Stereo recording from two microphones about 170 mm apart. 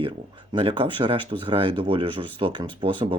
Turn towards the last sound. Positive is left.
turn(degrees=-30)  # may be behind; listen again after turning